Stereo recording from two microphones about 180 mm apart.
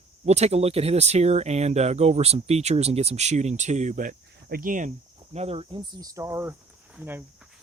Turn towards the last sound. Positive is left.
turn(degrees=-10)  # may be behind; listen again after turning